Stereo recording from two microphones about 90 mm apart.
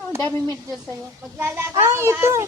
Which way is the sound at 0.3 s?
35° right (ahead or behind).